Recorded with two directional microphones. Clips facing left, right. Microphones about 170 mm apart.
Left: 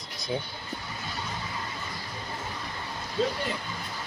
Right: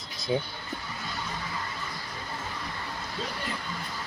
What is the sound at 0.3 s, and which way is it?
Speech, 20° right (ahead or behind).